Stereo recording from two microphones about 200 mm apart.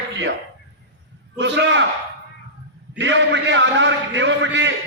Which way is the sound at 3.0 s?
65° right (ahead or behind).